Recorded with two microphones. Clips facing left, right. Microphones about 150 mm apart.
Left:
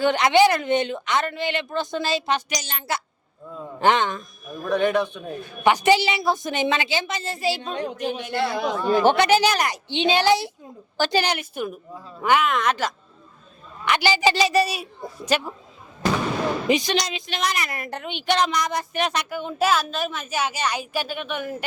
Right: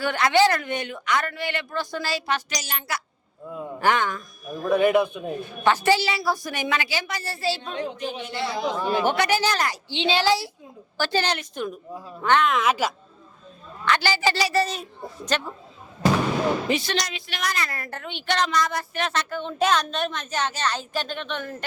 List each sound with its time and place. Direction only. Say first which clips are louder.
0.0 s a woman's voice: left 3 dB; 20° left (ahead or behind)
4.7 s a man's voice: right 2 dB; 10° right (ahead or behind)
5.6 s a woman's voice: left 3 dB; 15° left (ahead or behind)
7.8 s speech: left 2 dB; 55° left (ahead or behind)
8.8 s speech: left 5 dB; 5° right (ahead or behind)
9.0 s a woman's voice: left 6 dB; 25° left (ahead or behind); by 12.9 s 5° right (ahead or behind)
13.8 s a woman's voice: left 2 dB; 15° left (ahead or behind)
16.6 s a woman's voice: left 4 dB; 15° left (ahead or behind)